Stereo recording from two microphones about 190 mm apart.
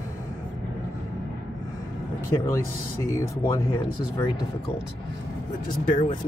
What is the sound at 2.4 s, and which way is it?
Speech, 15° left (ahead or behind).